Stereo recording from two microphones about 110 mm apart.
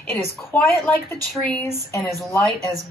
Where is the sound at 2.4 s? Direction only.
30° right (ahead or behind).